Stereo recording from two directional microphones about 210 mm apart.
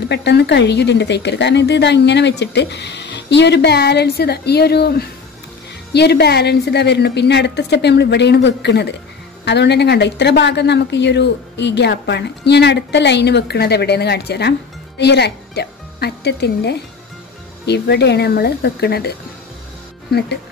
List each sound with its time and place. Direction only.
0.1 s speech: 55° left (ahead or behind)